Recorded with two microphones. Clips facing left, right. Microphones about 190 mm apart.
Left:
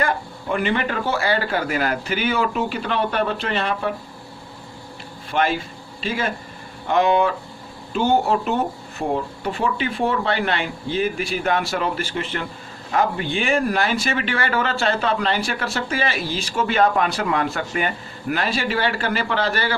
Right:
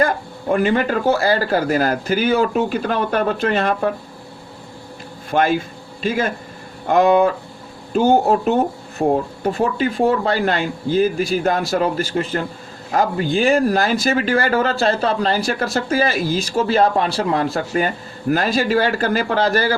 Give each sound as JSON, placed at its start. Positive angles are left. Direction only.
{"t": 0.0, "sound": "speech", "side_deg": -40}
{"t": 5.3, "sound": "speech", "side_deg": -45}